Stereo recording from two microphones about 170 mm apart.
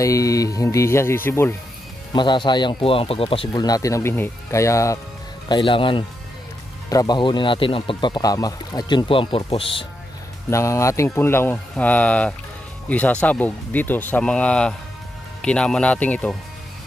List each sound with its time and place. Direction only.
0.0 s speech: 20° left (ahead or behind)
2.1 s speech: 25° left (ahead or behind)
5.5 s speech: 30° left (ahead or behind)
10.5 s speech: 15° left (ahead or behind)